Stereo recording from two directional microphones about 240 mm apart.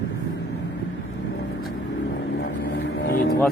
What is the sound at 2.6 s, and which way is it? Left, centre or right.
Vehicle, left.